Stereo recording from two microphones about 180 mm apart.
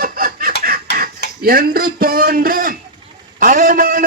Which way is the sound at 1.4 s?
55° right (ahead or behind).